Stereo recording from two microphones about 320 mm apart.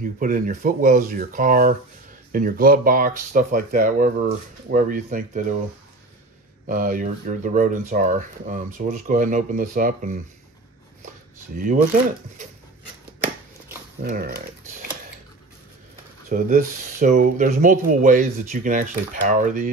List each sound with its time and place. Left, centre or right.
0.2 s speech: right
6.7 s speech: right
11.5 s speech: right
14.0 s dog: right
16.3 s speech: right